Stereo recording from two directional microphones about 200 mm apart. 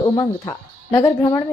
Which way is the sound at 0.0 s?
20° left (ahead or behind).